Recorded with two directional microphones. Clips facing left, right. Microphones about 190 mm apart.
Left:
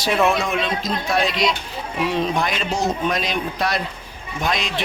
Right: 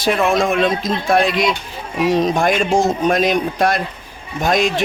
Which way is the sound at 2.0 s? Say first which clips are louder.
Right 7 dB; 40° right (ahead or behind).